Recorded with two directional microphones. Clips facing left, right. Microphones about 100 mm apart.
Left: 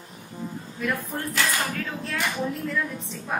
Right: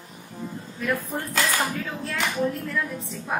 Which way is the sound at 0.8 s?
Centre (ahead or behind).